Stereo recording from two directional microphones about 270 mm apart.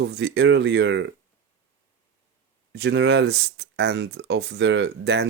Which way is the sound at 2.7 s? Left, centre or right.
Right.